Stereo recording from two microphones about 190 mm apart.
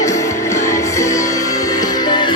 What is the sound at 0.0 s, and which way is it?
Music, 15° left (ahead or behind).